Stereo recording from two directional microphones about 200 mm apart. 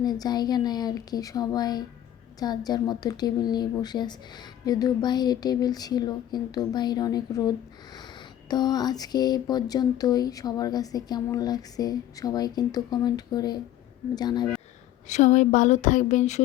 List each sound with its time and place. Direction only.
0.0 s speech: 20° left (ahead or behind)
15.0 s speech: 35° left (ahead or behind)